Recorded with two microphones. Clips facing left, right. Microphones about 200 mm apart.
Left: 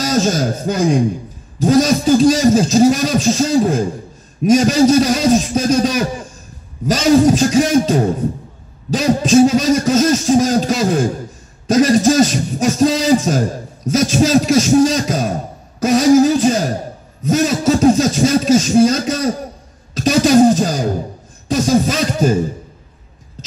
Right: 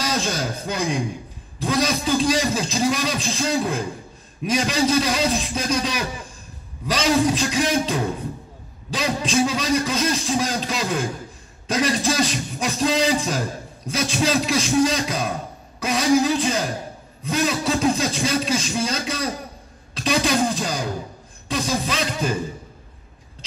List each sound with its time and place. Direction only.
0.0 s a man's voice: 40° left (ahead or behind)
1.6 s music: 45° left (ahead or behind)